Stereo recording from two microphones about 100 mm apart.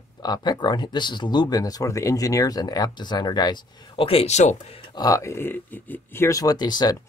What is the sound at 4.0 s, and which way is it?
Speech, 75° left (ahead or behind).